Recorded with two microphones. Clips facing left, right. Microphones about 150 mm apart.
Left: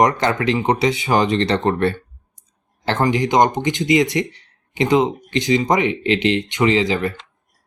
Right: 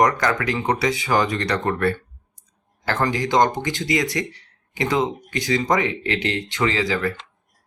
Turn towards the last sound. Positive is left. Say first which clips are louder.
# left 4 dB
turn(degrees=20)  # may be behind; listen again after turning